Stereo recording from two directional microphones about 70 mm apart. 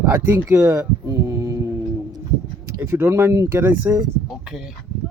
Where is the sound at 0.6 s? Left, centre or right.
Right.